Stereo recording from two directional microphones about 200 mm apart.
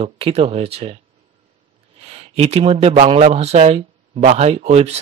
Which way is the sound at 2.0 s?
30° right (ahead or behind).